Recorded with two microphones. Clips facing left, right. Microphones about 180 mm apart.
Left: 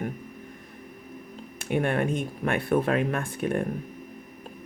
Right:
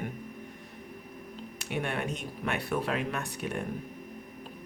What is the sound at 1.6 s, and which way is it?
Speech, 50° left (ahead or behind).